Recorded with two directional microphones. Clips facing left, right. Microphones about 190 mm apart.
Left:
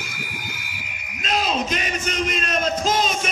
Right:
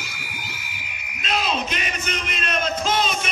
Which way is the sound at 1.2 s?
40° left (ahead or behind).